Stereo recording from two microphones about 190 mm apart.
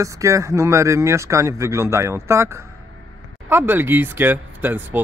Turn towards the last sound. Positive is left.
turn(degrees=-10)  # may be behind; listen again after turning